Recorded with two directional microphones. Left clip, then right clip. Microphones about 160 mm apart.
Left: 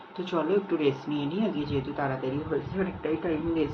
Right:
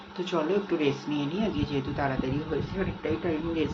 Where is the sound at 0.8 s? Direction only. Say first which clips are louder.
Left 1 dB; 10° right (ahead or behind).